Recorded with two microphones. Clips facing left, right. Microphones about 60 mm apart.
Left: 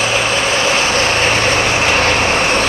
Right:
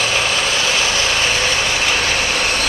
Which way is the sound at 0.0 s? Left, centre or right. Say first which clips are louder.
Left 3 dB; left.